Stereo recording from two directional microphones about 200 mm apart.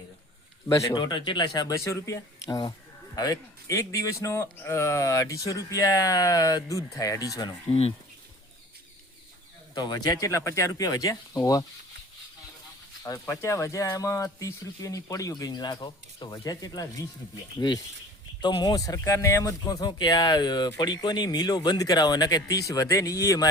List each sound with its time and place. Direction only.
0.7 s a man's voice: 20° left (ahead or behind)
9.7 s a man's voice: 20° left (ahead or behind)
13.1 s a man's voice: 15° left (ahead or behind)
18.4 s speech: 20° left (ahead or behind)